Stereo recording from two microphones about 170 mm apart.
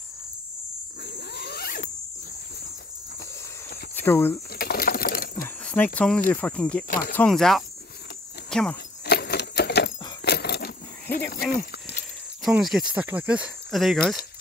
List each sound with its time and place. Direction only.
1.0 s zipper: 75° left (ahead or behind)
3.9 s speech: 15° left (ahead or behind)
4.5 s sewing machine: 65° left (ahead or behind)
5.6 s a sound: 5° left (ahead or behind)
5.9 s speech: 5° left (ahead or behind)
9.0 s a sound: 70° left (ahead or behind)
12.4 s speech: 5° right (ahead or behind)